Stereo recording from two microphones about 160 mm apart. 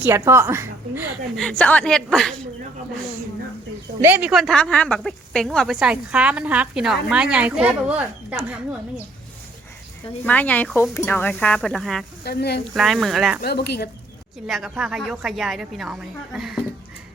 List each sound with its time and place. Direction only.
0.0 s a woman's voice: 15° right (ahead or behind)
1.4 s speech: 5° left (ahead or behind)
4.0 s speech: 10° right (ahead or behind)
10.2 s speech: 10° left (ahead or behind)
12.2 s speech: 85° left
12.7 s speech: centre (ahead or behind)
13.4 s speech: 90° left
14.4 s speech: centre (ahead or behind)